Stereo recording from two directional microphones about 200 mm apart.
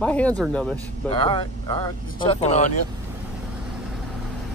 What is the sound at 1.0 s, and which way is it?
Speech, 25° left (ahead or behind).